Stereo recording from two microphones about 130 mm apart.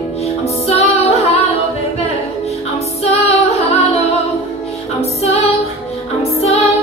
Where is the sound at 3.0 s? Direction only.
55° left (ahead or behind).